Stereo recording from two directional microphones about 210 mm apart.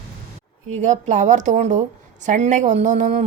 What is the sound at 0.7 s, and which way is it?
A woman's voice, 35° right (ahead or behind).